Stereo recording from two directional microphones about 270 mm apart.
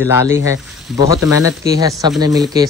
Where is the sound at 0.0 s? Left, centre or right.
Centre.